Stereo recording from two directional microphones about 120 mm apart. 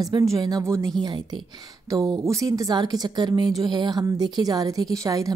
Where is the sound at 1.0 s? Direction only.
35° right (ahead or behind).